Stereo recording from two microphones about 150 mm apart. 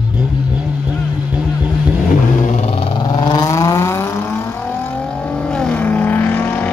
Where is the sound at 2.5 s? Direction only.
45° left (ahead or behind).